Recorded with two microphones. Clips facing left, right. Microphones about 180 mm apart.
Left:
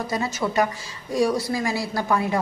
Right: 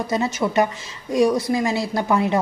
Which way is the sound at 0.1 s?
20° right (ahead or behind).